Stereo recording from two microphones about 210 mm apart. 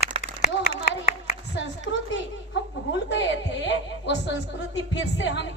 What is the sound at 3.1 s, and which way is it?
A woman's voice, 60° left (ahead or behind).